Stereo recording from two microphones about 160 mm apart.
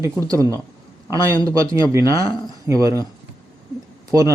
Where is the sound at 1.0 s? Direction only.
30° left (ahead or behind).